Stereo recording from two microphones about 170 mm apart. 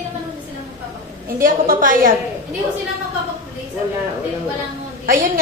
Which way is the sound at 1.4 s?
50° right (ahead or behind).